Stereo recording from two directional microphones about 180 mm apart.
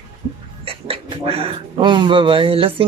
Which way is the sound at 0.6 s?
30° right (ahead or behind).